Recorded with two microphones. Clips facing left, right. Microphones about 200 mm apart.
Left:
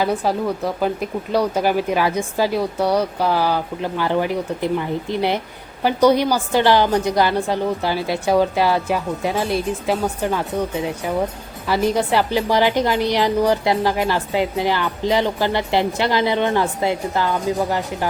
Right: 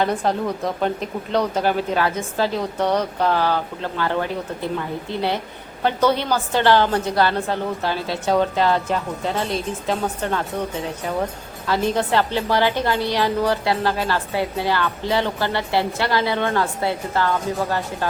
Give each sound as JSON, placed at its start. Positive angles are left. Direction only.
{"t": 0.0, "sound": "a woman's voice", "side_deg": 5}
{"t": 11.6, "sound": "a woman's voice", "side_deg": 10}